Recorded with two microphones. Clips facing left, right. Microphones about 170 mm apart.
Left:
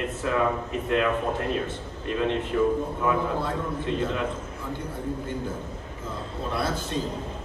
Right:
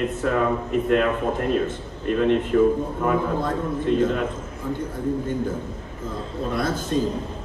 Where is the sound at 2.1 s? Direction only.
50° right (ahead or behind).